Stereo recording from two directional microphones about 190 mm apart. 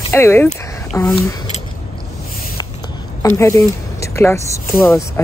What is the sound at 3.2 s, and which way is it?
Speech, 15° left (ahead or behind).